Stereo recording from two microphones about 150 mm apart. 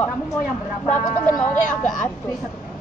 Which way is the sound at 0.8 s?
55° left (ahead or behind).